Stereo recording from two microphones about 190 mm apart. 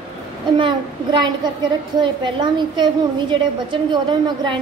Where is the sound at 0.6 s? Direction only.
25° right (ahead or behind).